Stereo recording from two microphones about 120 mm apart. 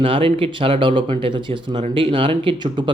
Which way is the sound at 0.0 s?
50° right (ahead or behind).